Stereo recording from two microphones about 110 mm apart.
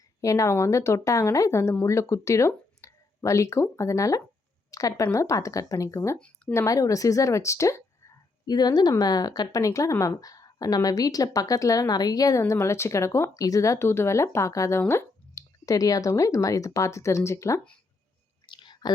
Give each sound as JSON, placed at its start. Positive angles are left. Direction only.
{"t": 0.2, "sound": "speech", "side_deg": 30}
{"t": 8.4, "sound": "speech", "side_deg": 40}
{"t": 18.4, "sound": "whispering", "side_deg": 45}